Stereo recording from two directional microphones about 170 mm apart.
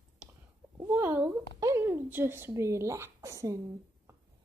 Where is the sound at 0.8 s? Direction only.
15° right (ahead or behind).